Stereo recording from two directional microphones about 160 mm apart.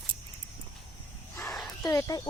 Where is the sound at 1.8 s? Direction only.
20° left (ahead or behind).